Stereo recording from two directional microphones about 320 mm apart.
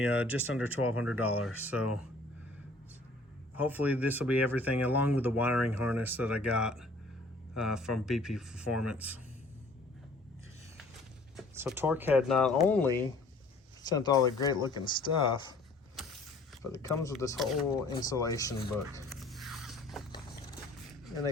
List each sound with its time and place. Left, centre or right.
0.0 s speech: centre
0.8 s speech: left
3.5 s speech: centre
5.5 s speech: left
5.9 s speech: centre
8.6 s speech: left
8.9 s speech: centre
11.3 s speech: centre
16.7 s speech: centre
17.8 s speech: centre
18.9 s a sound: centre